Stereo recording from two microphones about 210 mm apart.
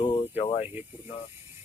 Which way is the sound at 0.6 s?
10° right (ahead or behind).